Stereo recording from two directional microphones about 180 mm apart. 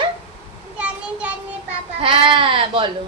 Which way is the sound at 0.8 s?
5° right (ahead or behind).